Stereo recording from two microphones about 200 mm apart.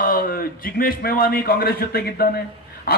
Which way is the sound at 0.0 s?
45° left (ahead or behind).